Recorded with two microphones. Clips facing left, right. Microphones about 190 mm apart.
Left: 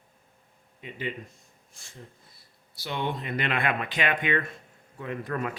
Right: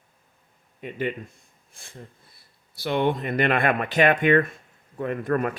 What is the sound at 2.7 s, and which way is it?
Speech, 55° right (ahead or behind).